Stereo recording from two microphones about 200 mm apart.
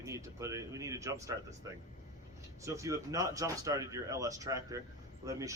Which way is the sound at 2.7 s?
15° right (ahead or behind).